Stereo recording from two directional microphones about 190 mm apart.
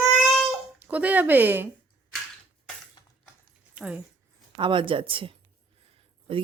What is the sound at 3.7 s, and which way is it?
Speech, 5° right (ahead or behind).